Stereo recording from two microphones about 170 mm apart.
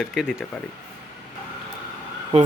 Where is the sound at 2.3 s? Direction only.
35° right (ahead or behind).